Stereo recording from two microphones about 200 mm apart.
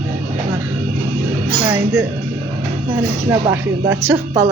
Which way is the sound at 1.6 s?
15° right (ahead or behind).